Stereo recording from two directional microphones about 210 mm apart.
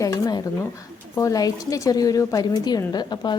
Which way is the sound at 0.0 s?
20° left (ahead or behind).